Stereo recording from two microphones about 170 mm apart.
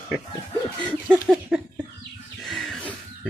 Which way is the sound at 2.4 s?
Centre (ahead or behind).